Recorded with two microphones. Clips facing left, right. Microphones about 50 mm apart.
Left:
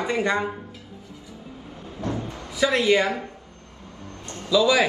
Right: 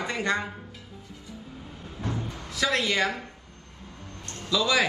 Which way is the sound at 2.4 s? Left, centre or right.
Centre.